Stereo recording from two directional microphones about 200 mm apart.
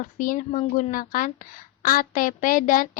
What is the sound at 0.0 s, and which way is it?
A woman's voice, 40° left (ahead or behind).